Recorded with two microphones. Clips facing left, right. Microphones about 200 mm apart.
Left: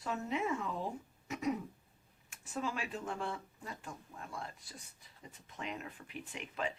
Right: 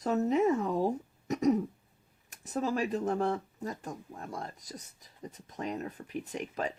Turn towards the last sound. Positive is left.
turn(degrees=-40)  # may be behind; listen again after turning